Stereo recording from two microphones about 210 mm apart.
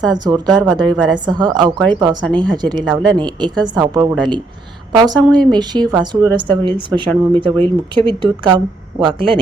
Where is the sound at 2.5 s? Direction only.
20° right (ahead or behind).